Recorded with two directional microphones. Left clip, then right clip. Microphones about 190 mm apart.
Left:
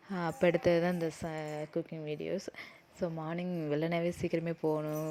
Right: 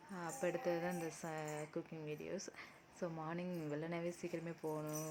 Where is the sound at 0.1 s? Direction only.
40° left (ahead or behind).